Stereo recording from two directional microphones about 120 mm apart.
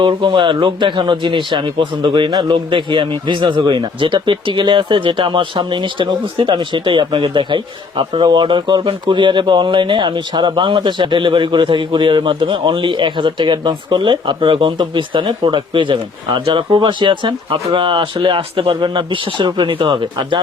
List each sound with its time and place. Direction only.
0.0 s speech: 45° right (ahead or behind)